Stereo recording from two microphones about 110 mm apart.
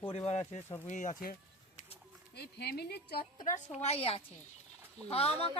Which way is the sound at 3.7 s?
70° left (ahead or behind).